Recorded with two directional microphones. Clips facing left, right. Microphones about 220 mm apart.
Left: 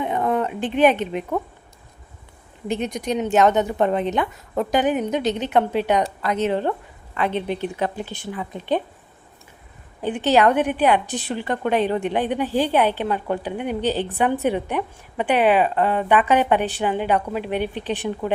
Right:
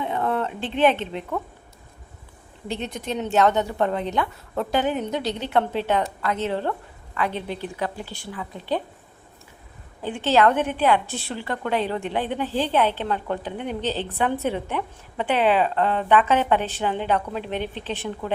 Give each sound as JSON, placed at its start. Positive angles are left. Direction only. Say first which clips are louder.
{"t": 0.0, "sound": "a sound", "louder": "left 3 dB", "side_deg": 15}
{"t": 2.6, "sound": "a woman's voice", "louder": "left 5 dB", "side_deg": 15}
{"t": 10.0, "sound": "a woman's voice", "louder": "left 2 dB", "side_deg": 20}